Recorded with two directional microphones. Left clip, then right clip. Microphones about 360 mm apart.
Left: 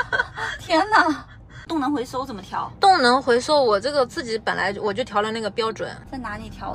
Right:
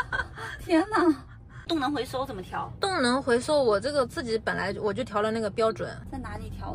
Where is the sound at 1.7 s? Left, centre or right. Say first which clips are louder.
Left 4 dB; left.